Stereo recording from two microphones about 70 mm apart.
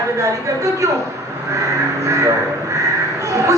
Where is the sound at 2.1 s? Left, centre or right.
Right.